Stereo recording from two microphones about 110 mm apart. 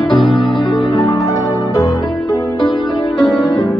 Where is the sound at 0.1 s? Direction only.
45° left (ahead or behind).